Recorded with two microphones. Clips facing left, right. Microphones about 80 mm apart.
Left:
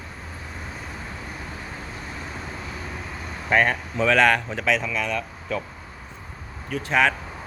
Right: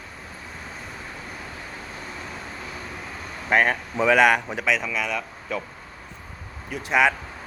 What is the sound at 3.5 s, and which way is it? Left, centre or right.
Speech, centre.